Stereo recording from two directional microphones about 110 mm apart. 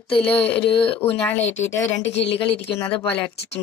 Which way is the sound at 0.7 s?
55° left (ahead or behind).